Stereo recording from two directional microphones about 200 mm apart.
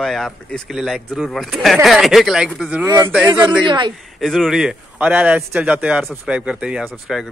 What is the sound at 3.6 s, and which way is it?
Speech, 25° right (ahead or behind).